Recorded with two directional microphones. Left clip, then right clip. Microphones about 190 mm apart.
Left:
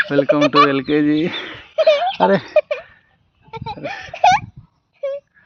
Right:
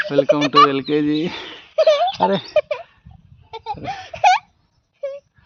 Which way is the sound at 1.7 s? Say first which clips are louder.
Even; 20° right (ahead or behind).